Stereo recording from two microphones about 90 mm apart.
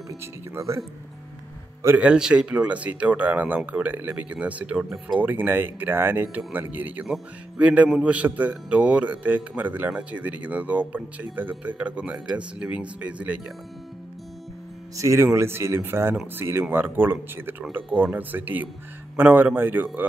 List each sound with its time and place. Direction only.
0.2 s speech: 35° right (ahead or behind)
2.0 s speech: 10° right (ahead or behind)
5.2 s speech: 20° right (ahead or behind)
15.0 s speech: 35° right (ahead or behind)